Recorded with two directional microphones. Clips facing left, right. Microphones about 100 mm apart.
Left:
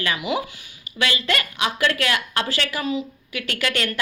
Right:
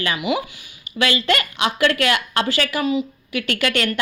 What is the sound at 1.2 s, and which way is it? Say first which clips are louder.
A woman's voice: right 4 dB; 30° right (ahead or behind).